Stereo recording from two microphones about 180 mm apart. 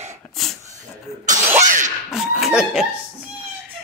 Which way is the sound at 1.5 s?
45° right (ahead or behind).